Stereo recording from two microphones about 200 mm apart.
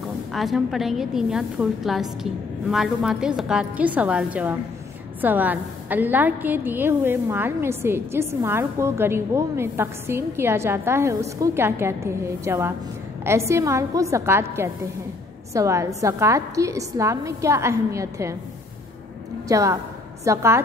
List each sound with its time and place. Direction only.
0.3 s a woman's voice: centre (ahead or behind)
15.5 s a woman's voice: 15° right (ahead or behind)
19.4 s a woman's voice: 15° right (ahead or behind)